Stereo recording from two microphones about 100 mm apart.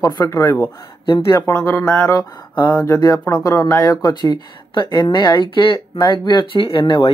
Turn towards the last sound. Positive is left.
turn(degrees=45)  # may be behind; listen again after turning